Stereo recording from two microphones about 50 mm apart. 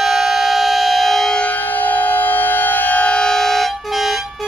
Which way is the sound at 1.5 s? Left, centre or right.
Left.